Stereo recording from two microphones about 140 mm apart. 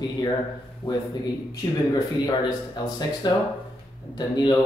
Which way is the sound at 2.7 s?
30° left (ahead or behind).